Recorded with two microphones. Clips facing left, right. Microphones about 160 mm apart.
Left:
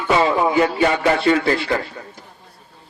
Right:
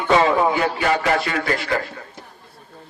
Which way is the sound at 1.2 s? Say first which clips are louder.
Left 6 dB; 30° left (ahead or behind).